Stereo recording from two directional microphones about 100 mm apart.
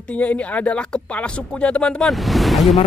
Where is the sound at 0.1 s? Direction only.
15° left (ahead or behind).